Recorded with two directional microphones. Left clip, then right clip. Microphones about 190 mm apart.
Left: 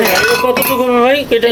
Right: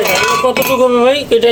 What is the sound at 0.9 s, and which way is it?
Speech, 20° right (ahead or behind).